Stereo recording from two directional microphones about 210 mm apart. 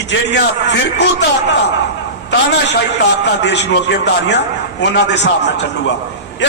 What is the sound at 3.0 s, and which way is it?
A man's voice, 55° left (ahead or behind).